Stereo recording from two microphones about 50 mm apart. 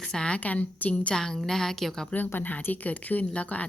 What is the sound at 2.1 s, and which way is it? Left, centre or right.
Speech, left.